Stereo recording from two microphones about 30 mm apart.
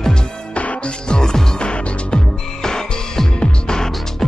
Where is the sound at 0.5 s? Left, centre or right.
Left.